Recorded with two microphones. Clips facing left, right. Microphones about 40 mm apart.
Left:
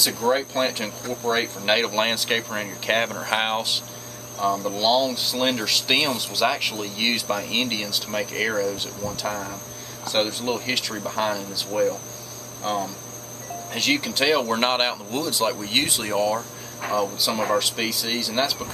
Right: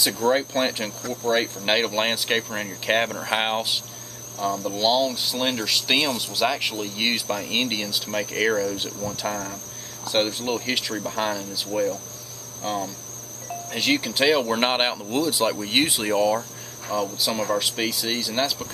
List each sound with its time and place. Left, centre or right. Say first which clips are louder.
0.2 s speech: right 1 dB; centre
9.3 s speech: even; centre
10.0 s speech: even; centre
11.7 s speech: left 2 dB; left
12.6 s speech: left 2 dB; centre
13.7 s speech: even; centre
16.9 s speech: left 1 dB; centre